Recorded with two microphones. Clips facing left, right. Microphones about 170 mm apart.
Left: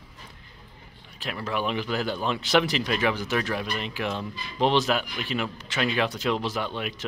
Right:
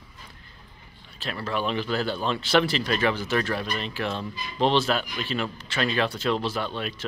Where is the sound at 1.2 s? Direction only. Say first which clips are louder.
Even; 15° left (ahead or behind).